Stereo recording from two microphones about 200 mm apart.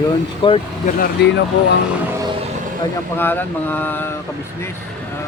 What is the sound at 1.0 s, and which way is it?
Speech, 55° left (ahead or behind).